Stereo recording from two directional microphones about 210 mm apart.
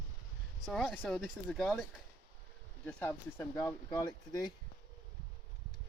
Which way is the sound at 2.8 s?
10° left (ahead or behind).